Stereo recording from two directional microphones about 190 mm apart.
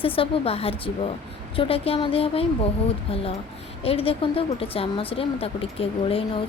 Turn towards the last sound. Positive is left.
turn(degrees=30)  # may be behind; listen again after turning